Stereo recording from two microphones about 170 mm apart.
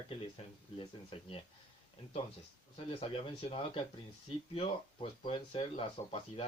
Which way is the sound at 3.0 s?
35° left (ahead or behind).